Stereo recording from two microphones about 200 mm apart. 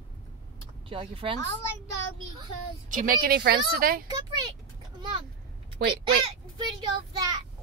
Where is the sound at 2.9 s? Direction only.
45° right (ahead or behind).